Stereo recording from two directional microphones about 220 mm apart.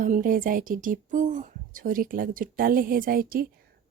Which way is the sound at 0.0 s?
40° right (ahead or behind).